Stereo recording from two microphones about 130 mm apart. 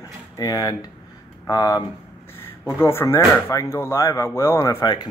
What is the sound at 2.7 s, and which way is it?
Speech, 20° left (ahead or behind).